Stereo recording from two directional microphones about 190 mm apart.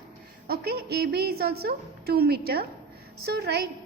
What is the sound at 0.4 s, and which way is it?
A woman's voice, 55° right (ahead or behind).